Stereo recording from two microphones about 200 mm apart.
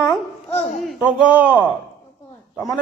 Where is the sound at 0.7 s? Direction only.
Centre (ahead or behind).